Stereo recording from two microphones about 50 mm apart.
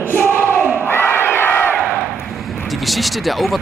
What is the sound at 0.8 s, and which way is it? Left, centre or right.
Crowd, left.